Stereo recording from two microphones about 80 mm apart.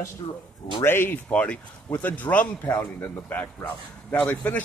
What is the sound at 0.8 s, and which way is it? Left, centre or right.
Speech, left.